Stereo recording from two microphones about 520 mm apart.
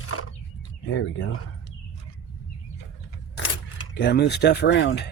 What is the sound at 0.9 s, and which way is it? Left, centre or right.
Speech, left.